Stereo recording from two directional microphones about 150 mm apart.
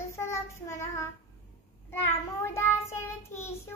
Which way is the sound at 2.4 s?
15° left (ahead or behind).